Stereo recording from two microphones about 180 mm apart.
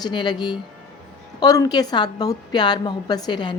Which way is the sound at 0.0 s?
25° left (ahead or behind).